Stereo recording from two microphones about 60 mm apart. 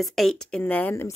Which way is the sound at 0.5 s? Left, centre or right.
Centre.